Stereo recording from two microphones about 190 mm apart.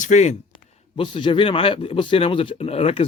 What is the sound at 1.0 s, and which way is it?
Speech, 25° left (ahead or behind).